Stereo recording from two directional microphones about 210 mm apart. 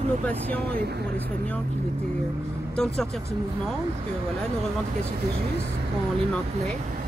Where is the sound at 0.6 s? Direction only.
50° right (ahead or behind).